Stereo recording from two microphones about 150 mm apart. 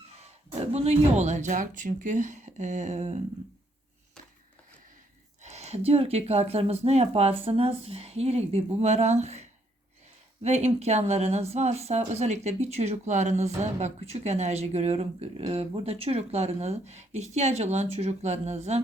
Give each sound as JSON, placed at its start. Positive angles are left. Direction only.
{"t": 0.2, "sound": "speech", "side_deg": -45}
{"t": 5.4, "sound": "speech", "side_deg": -45}